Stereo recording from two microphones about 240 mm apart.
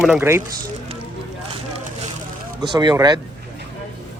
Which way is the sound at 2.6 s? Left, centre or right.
Centre.